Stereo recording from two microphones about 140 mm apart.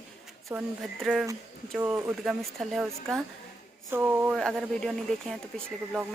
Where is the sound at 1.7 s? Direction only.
15° right (ahead or behind).